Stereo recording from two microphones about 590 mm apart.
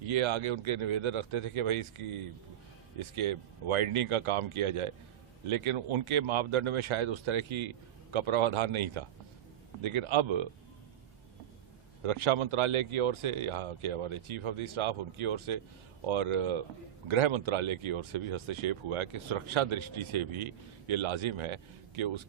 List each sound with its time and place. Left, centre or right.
0.0 s speech: right
12.0 s speech: right